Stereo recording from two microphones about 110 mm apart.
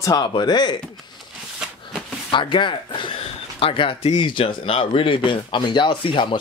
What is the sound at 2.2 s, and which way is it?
Speech, 45° left (ahead or behind).